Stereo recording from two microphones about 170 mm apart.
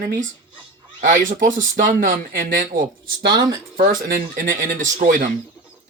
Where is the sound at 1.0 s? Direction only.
50° right (ahead or behind).